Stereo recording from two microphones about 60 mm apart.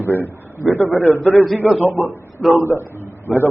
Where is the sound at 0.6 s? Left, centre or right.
Left.